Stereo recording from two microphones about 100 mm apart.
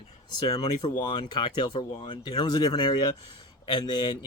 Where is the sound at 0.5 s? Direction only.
50° left (ahead or behind).